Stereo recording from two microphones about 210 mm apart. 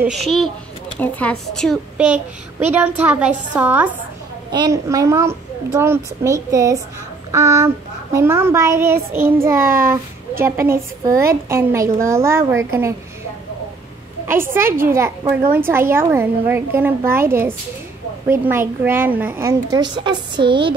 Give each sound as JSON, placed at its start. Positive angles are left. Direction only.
{"t": 0.0, "sound": "a woman's voice", "side_deg": 0}
{"t": 9.6, "sound": "a child's voice", "side_deg": -40}
{"t": 10.4, "sound": "a woman's voice", "side_deg": -10}
{"t": 14.2, "sound": "a woman's voice", "side_deg": -10}